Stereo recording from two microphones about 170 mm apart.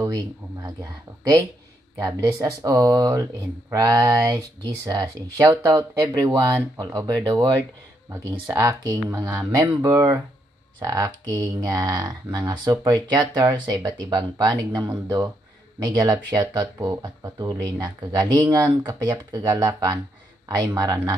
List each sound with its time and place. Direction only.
0.0 s speech: 20° right (ahead or behind)
2.0 s speech: 20° right (ahead or behind)
8.1 s speech: 15° right (ahead or behind)